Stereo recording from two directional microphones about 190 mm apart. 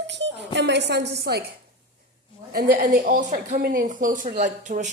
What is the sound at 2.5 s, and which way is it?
A woman's voice, 50° right (ahead or behind).